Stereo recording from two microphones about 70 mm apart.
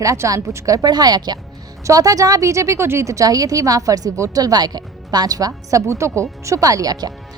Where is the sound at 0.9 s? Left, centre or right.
Right.